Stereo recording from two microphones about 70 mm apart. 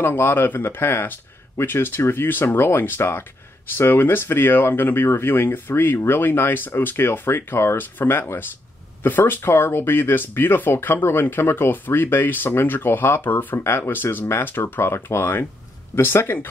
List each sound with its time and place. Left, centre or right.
0.0 s speech: left